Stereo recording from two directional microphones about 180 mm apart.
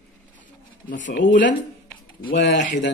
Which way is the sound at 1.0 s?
45° left (ahead or behind).